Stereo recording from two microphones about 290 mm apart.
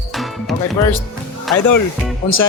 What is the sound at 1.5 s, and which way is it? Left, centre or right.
Speech, left.